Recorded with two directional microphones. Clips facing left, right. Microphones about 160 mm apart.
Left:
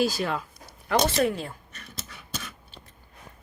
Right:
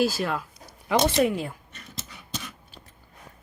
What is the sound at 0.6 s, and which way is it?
Speech, 15° right (ahead or behind).